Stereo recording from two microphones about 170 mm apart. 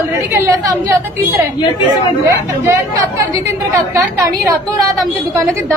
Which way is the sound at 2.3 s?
15° right (ahead or behind).